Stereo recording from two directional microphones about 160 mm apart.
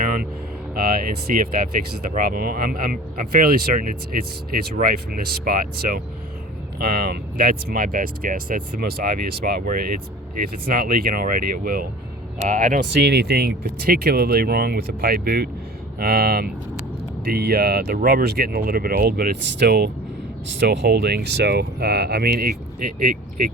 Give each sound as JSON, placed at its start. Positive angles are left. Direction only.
{"t": 0.7, "sound": "speech", "side_deg": -70}